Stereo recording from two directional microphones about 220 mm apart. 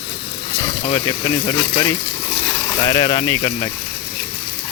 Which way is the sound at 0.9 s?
20° left (ahead or behind).